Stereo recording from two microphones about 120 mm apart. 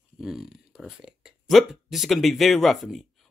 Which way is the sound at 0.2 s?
5° right (ahead or behind).